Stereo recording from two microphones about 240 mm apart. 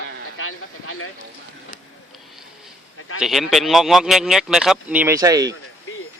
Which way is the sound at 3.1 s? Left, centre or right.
Centre.